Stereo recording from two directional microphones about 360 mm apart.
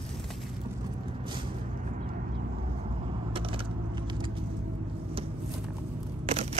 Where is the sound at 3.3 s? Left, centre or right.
Centre.